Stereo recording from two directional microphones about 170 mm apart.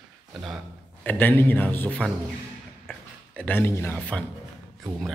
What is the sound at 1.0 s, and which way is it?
A man's voice, 10° left (ahead or behind).